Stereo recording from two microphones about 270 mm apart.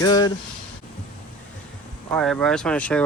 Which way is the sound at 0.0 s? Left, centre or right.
Centre.